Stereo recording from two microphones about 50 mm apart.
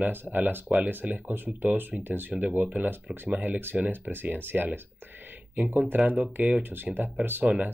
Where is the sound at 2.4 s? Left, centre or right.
Right.